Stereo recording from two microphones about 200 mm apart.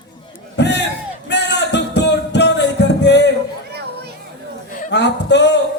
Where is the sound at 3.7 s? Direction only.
55° right (ahead or behind).